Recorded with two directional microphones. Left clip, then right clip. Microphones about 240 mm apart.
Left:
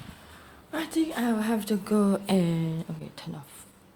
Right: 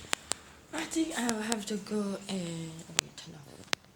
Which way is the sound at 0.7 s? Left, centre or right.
Centre.